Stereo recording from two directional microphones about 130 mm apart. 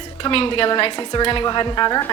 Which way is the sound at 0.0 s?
45° left (ahead or behind).